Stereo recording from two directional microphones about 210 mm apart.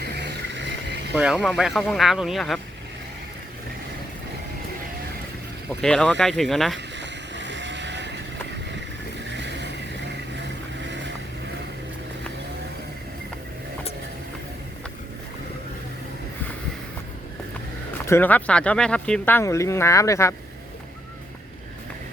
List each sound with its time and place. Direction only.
0.0 s vehicle: 50° right (ahead or behind)
1.1 s speech: 5° right (ahead or behind)
5.8 s speech: 5° left (ahead or behind)
6.7 s vehicle: 55° right (ahead or behind)
9.3 s vehicle: 55° right (ahead or behind)
10.8 s vehicle: 60° right (ahead or behind)
17.9 s speech: 10° left (ahead or behind)